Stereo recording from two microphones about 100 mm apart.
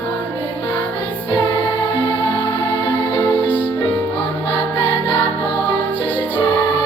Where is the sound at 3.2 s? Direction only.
20° left (ahead or behind).